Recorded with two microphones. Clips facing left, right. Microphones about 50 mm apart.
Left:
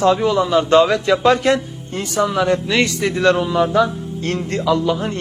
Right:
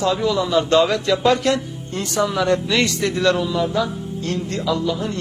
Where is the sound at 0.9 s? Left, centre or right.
Centre.